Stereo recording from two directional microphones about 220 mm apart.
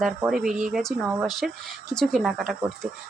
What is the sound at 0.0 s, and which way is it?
Speech, 5° right (ahead or behind).